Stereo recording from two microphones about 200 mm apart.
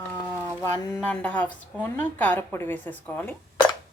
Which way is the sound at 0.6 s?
15° left (ahead or behind).